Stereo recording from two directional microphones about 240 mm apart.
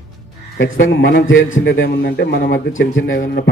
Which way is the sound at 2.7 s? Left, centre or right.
Left.